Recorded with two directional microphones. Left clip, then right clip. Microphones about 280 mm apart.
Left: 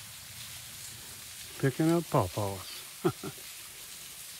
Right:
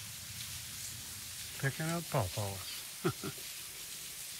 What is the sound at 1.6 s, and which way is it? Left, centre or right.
Speech, centre.